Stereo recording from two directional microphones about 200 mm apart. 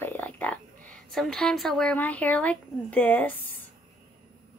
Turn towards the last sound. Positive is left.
turn(degrees=10)  # may be behind; listen again after turning